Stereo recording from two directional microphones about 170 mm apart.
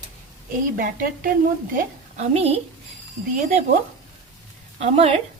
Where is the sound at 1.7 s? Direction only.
50° right (ahead or behind).